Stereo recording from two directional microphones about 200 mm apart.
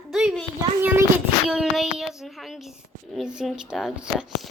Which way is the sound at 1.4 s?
5° right (ahead or behind).